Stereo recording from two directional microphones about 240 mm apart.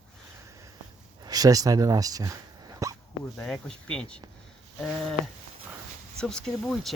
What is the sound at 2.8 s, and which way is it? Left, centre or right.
Hiccup, centre.